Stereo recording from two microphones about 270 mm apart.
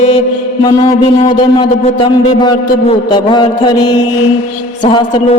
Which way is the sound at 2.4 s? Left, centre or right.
Centre.